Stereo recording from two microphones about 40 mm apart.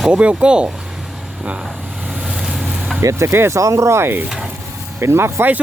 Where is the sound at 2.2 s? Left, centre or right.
Right.